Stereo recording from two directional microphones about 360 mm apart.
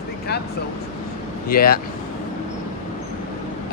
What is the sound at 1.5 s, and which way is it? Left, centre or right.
Speech, left.